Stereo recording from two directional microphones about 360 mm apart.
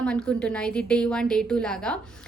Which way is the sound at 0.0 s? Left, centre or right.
Centre.